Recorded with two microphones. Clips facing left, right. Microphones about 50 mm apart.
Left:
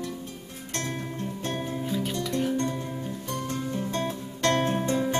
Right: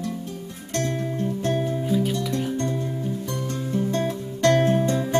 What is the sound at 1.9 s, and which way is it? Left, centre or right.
Music, centre.